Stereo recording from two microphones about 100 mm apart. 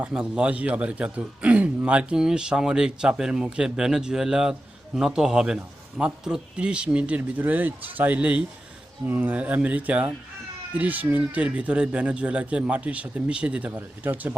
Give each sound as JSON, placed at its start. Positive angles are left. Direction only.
{"t": 0.0, "sound": "a man's voice", "side_deg": -10}
{"t": 13.7, "sound": "speech", "side_deg": -20}